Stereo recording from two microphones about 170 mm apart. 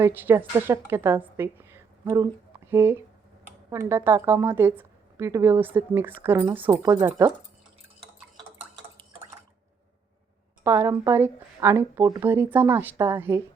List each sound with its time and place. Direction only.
0.0 s speech: 10° right (ahead or behind)
2.0 s speech: 25° right (ahead or behind)
2.6 s speech: 15° right (ahead or behind)
10.6 s speech: 15° right (ahead or behind)